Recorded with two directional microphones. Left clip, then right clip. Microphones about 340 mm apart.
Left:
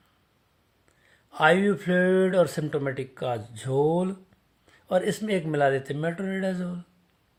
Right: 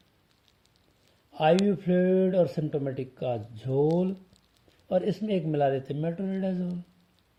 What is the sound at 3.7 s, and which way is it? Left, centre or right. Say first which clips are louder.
Speech: left 2 dB; left.